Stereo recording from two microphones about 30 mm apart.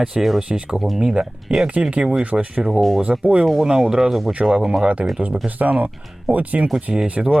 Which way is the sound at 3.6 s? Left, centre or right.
Right.